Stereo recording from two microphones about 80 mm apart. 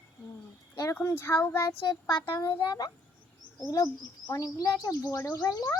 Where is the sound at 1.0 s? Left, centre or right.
Left.